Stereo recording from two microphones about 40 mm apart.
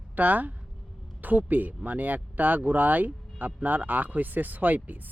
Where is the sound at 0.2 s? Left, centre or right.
Right.